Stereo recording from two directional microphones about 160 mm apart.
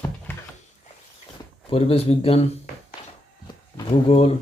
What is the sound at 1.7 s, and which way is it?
Speech, 40° left (ahead or behind).